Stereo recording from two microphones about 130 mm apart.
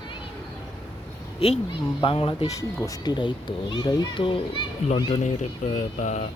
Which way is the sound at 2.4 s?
30° left (ahead or behind).